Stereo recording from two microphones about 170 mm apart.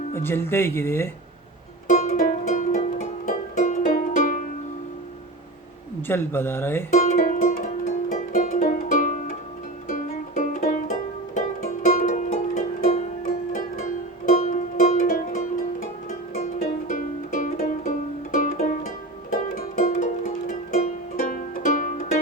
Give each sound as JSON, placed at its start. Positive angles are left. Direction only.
{"t": 0.1, "sound": "speech", "side_deg": 15}
{"t": 1.9, "sound": "music", "side_deg": 45}
{"t": 6.1, "sound": "speech", "side_deg": 15}
{"t": 6.9, "sound": "music", "side_deg": 45}